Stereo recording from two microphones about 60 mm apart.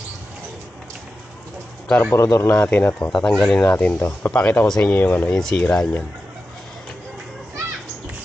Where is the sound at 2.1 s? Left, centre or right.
Left.